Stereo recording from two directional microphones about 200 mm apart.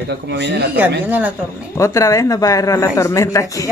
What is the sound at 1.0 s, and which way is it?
Speech, 10° right (ahead or behind).